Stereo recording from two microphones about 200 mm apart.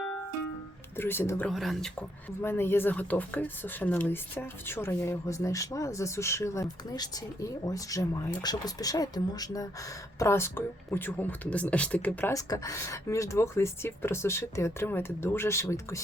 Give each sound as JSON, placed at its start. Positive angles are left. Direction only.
{"t": 0.9, "sound": "speech", "side_deg": 10}